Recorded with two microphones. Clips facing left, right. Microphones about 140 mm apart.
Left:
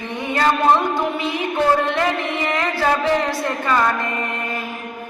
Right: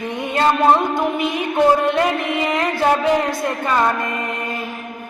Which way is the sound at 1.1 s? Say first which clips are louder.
Right 2 dB; 15° right (ahead or behind).